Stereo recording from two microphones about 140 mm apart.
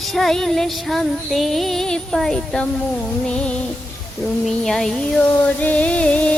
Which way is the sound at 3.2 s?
5° left (ahead or behind).